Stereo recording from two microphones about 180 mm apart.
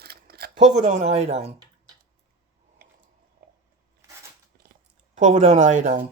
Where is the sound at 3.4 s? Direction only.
60° right (ahead or behind).